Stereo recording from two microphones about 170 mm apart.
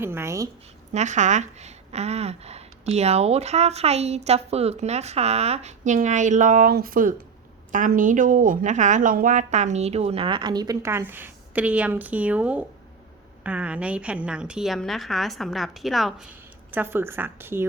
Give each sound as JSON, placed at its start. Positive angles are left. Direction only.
{"t": 0.0, "sound": "a woman's voice", "side_deg": -15}
{"t": 0.9, "sound": "a woman's voice", "side_deg": -45}
{"t": 16.7, "sound": "a woman's voice", "side_deg": -15}